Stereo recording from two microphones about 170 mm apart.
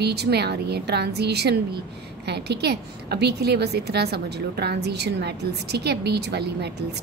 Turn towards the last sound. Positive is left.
turn(degrees=-75)  # may be behind; listen again after turning